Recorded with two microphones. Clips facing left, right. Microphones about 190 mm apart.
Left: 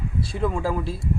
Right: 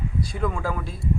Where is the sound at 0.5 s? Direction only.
30° left (ahead or behind).